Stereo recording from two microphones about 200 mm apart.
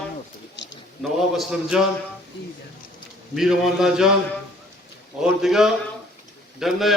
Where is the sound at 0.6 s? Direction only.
60° left (ahead or behind).